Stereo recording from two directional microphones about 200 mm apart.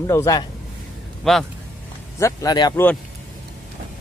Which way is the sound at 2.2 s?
15° left (ahead or behind).